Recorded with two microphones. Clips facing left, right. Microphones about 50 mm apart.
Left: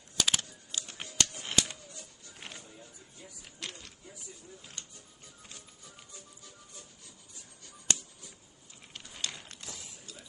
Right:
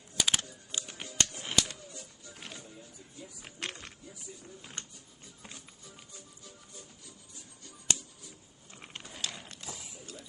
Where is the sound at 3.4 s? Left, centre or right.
Right.